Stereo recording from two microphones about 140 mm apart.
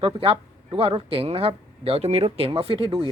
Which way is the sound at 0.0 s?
40° right (ahead or behind).